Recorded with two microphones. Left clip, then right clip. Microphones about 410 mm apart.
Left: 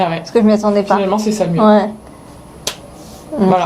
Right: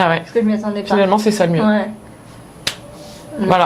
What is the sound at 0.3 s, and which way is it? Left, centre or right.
Speech, left.